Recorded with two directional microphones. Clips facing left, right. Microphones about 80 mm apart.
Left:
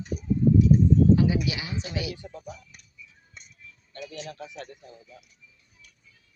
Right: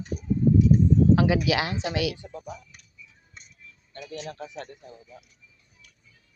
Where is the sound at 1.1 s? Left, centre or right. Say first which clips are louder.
Right 3 dB; right.